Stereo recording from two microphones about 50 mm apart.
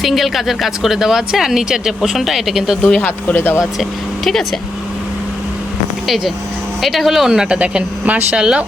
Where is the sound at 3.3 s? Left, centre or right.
Left.